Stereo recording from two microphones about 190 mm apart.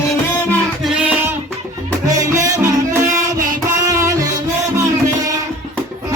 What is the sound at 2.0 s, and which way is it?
Music, 15° right (ahead or behind).